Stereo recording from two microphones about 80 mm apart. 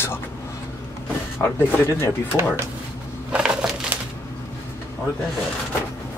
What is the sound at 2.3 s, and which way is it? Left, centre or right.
Speech, right.